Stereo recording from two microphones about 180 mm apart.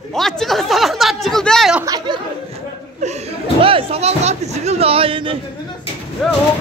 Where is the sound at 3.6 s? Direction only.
30° right (ahead or behind).